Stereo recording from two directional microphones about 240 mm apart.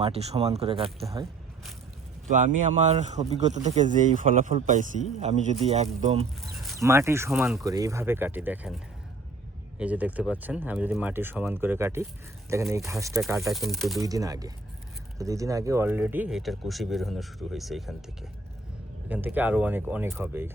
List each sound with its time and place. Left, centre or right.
0.0 s a man's voice: right
2.2 s a man's voice: right
6.4 s a sound: centre
6.7 s speech: centre
13.2 s speech: centre
14.0 s speech: centre
19.0 s speech: centre